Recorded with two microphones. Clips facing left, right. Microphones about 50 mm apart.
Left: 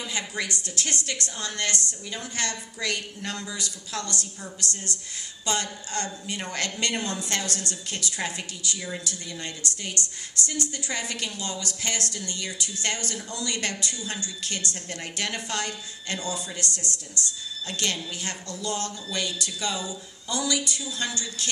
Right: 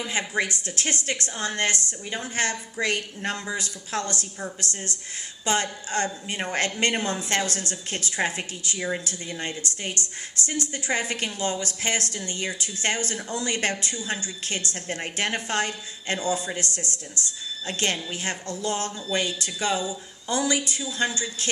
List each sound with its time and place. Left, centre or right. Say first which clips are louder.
0.0 s a woman's voice: right 5 dB; right
10.0 s a woman's voice: even; left
10.7 s a woman's voice: right 5 dB; right
16.8 s a woman's voice: even; left
17.7 s a woman's voice: right 3 dB; right